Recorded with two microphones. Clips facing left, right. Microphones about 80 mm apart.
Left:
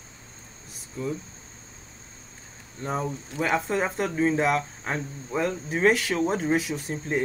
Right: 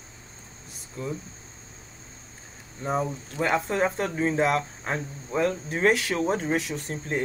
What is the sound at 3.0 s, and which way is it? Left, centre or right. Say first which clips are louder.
Speech: even; centre.